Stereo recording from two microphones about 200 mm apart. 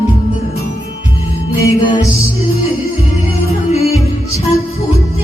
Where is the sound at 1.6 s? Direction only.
20° left (ahead or behind).